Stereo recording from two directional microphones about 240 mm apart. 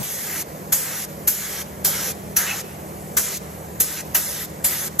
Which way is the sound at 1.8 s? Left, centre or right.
Centre.